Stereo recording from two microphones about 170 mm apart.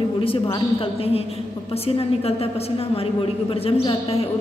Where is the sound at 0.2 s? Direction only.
35° left (ahead or behind).